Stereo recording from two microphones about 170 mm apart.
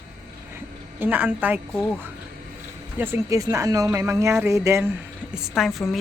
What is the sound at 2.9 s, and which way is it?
A woman's voice, 15° right (ahead or behind).